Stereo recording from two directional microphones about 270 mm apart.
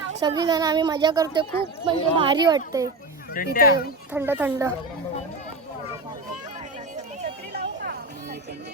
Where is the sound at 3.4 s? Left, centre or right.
Left.